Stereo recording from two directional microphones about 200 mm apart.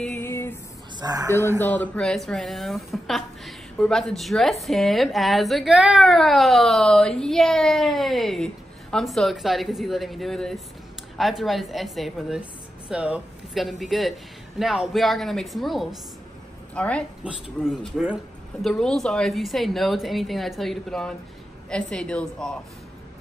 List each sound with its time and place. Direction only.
0.0 s music: 10° left (ahead or behind)
0.9 s speech: 20° right (ahead or behind)
1.6 s a woman's voice: 10° left (ahead or behind)